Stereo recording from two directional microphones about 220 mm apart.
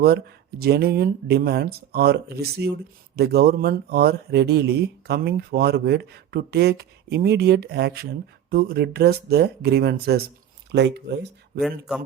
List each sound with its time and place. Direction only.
0.0 s speech: 45° right (ahead or behind)